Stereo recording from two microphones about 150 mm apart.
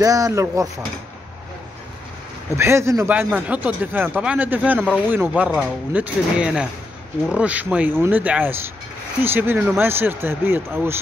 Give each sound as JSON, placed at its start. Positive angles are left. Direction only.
{"t": 0.0, "sound": "speech", "side_deg": -25}
{"t": 2.5, "sound": "speech", "side_deg": -20}